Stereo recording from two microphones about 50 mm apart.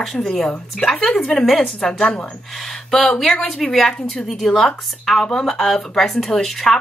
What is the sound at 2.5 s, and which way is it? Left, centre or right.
A woman's voice, centre.